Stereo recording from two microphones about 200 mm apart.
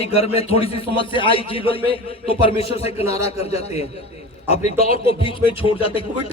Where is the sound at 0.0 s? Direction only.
30° left (ahead or behind).